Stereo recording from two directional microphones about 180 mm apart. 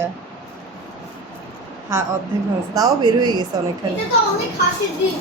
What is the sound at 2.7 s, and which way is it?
Speech, 20° right (ahead or behind).